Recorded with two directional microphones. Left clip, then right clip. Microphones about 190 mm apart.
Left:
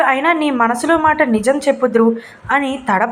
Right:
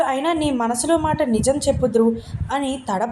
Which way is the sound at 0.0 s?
5° left (ahead or behind).